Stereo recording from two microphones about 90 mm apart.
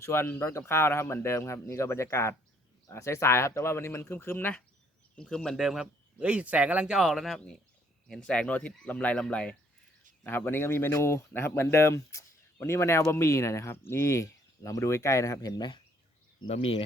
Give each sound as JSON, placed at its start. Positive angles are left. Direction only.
{"t": 0.0, "sound": "a man's voice", "side_deg": 25}
{"t": 5.1, "sound": "speech", "side_deg": 10}
{"t": 5.5, "sound": "speech", "side_deg": -5}
{"t": 10.2, "sound": "a man's voice", "side_deg": 25}
{"t": 16.5, "sound": "speech", "side_deg": 80}